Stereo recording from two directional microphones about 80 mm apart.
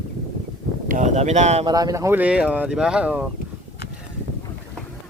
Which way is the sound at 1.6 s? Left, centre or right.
Right.